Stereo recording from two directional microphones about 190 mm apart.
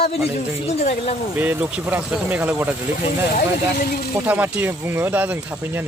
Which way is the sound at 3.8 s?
50° left (ahead or behind).